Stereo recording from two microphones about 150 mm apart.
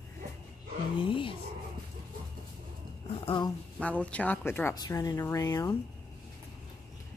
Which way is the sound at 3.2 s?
30° left (ahead or behind).